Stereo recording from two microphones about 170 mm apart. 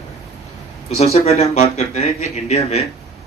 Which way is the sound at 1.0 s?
40° left (ahead or behind).